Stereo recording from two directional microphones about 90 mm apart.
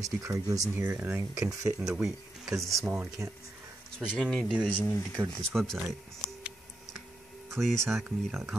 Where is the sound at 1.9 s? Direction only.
5° right (ahead or behind).